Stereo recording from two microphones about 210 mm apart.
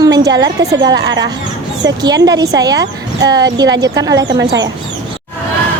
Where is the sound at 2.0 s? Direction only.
20° right (ahead or behind).